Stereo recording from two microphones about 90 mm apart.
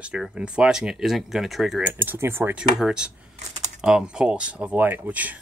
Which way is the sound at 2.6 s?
10° right (ahead or behind).